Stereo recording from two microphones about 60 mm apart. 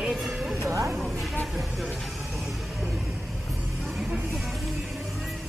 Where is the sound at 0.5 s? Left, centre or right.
Right.